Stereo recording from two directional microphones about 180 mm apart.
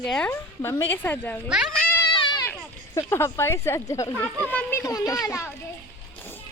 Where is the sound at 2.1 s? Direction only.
25° left (ahead or behind).